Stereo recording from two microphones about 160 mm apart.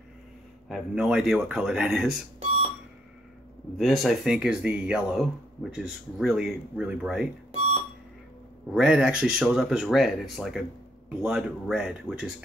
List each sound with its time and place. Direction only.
0.7 s speech: centre (ahead or behind)
3.7 s speech: centre (ahead or behind)
7.5 s a sound: 40° right (ahead or behind)
8.7 s speech: 5° right (ahead or behind)